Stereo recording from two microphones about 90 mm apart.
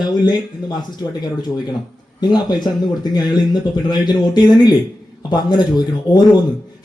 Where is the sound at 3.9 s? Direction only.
55° left (ahead or behind).